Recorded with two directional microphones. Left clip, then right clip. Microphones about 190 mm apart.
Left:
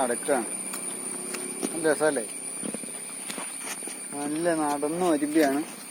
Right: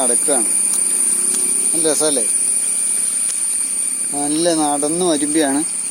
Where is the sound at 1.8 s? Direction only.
20° right (ahead or behind).